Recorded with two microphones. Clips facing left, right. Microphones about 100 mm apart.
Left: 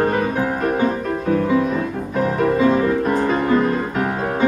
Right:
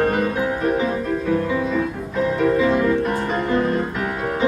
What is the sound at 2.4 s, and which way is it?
Music, 35° left (ahead or behind).